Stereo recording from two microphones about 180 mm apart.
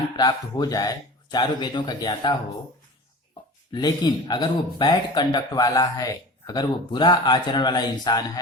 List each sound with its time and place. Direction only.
0.2 s speech: 20° left (ahead or behind)
3.7 s speech: 20° left (ahead or behind)